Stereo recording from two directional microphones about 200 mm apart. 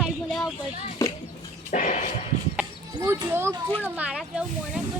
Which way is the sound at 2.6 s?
10° right (ahead or behind).